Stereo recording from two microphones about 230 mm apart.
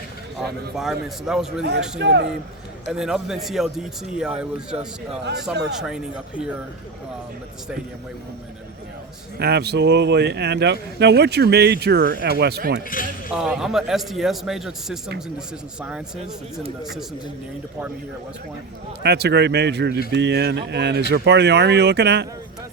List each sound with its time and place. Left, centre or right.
0.8 s speech: centre
2.0 s speech: right
2.9 s speech: centre
9.4 s speech: right
12.9 s speech: left
13.3 s speech: centre
19.0 s speech: right